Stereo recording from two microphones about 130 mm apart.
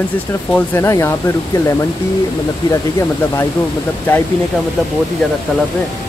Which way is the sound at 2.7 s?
20° left (ahead or behind).